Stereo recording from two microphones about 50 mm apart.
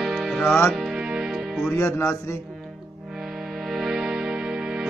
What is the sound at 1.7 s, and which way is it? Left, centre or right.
Speech, left.